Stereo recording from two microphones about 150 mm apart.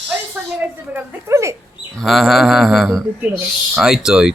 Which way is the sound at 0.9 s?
20° right (ahead or behind).